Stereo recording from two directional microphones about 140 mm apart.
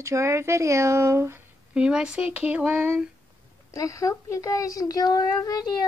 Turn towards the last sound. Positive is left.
turn(degrees=30)  # may be behind; listen again after turning